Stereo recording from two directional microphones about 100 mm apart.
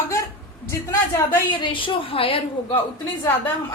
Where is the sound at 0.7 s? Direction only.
30° left (ahead or behind).